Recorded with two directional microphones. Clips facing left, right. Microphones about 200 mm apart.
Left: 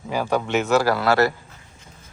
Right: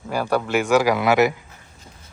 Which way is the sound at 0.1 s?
10° right (ahead or behind).